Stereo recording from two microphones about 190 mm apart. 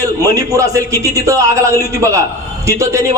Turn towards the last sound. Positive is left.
turn(degrees=-15)  # may be behind; listen again after turning